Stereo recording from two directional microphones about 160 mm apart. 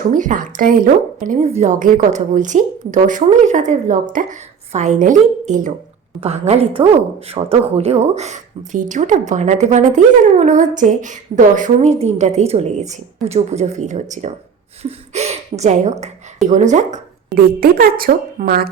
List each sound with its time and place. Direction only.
0.1 s a woman's voice: 55° right (ahead or behind)
6.1 s a woman's voice: 40° right (ahead or behind)
17.3 s a woman's voice: 70° right (ahead or behind)